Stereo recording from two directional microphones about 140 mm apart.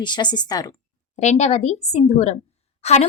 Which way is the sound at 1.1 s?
55° left (ahead or behind).